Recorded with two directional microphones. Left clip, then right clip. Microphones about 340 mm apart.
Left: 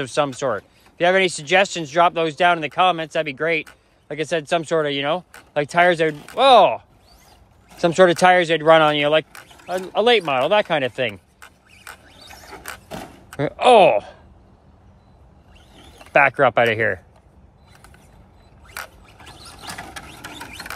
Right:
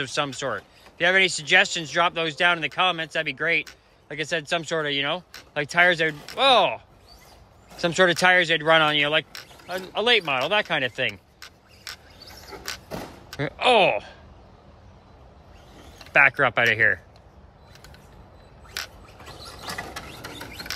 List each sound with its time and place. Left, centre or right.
0.0 s speech: centre
9.7 s a sound: centre
13.3 s speech: centre
16.0 s speech: centre
19.0 s mechanisms: centre